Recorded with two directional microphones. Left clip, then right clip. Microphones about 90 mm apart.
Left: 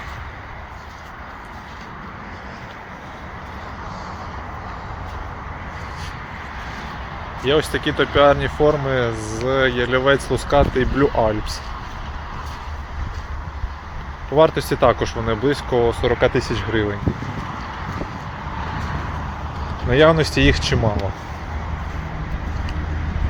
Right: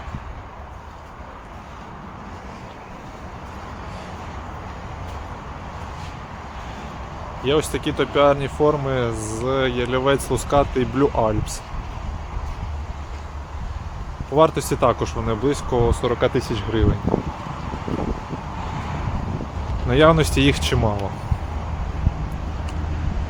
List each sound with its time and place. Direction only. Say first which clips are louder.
7.4 s speech: left 2 dB; 15° right (ahead or behind)
14.3 s speech: left 2 dB; 25° right (ahead or behind)
19.9 s speech: left 1 dB; 35° right (ahead or behind)